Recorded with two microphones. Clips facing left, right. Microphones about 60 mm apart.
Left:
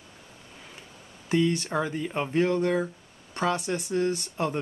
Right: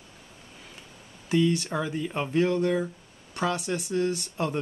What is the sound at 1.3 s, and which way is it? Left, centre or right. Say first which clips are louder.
Speech: even; left.